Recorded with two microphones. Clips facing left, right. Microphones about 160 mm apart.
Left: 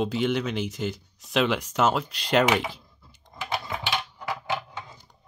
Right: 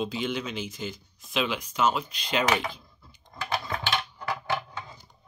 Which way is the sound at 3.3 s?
15° left (ahead or behind).